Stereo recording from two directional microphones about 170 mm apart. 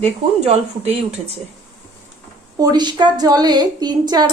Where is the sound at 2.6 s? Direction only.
25° right (ahead or behind).